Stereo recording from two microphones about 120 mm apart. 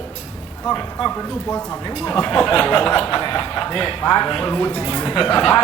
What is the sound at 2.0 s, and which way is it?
Speech, 10° left (ahead or behind).